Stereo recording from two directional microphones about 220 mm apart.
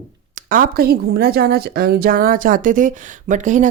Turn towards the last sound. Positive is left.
turn(degrees=-35)  # may be behind; listen again after turning